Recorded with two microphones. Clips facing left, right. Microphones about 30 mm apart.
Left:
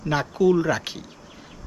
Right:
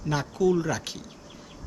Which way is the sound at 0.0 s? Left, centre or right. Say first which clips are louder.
Left 4 dB; left.